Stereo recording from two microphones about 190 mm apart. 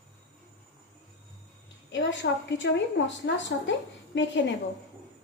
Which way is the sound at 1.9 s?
75° left (ahead or behind).